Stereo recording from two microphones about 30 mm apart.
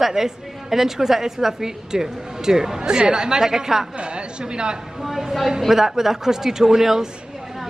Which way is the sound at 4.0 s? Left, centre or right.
Right.